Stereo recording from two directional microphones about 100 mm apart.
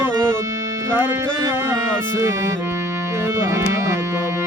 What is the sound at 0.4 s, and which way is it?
Music, 35° right (ahead or behind).